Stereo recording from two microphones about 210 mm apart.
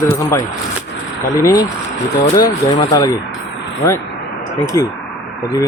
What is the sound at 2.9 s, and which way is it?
Speech, 15° left (ahead or behind).